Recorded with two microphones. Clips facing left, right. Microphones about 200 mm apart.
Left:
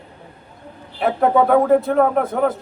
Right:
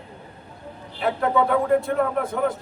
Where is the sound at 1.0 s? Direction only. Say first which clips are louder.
Left 5 dB; 60° left (ahead or behind).